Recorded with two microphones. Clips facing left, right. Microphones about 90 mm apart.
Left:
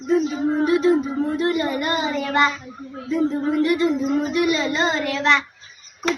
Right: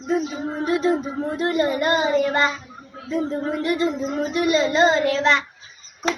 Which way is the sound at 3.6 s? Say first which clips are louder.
Left 2 dB; 30° right (ahead or behind).